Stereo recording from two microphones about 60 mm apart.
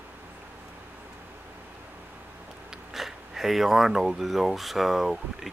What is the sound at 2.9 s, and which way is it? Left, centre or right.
Speech, centre.